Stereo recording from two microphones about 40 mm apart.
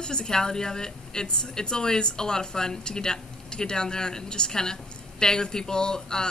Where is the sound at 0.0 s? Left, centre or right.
Centre.